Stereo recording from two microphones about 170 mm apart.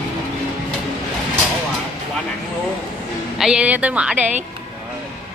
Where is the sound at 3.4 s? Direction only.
5° right (ahead or behind).